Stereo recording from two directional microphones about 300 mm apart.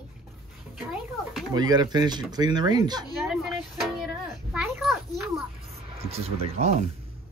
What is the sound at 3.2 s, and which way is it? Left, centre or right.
Music, centre.